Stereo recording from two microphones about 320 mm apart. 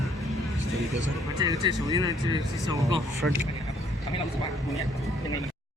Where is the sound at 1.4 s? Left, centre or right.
Centre.